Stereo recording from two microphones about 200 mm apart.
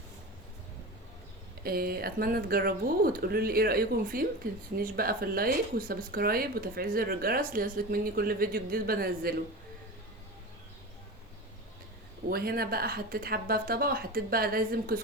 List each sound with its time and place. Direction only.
1.6 s speech: 50° right (ahead or behind)
12.3 s speech: 50° right (ahead or behind)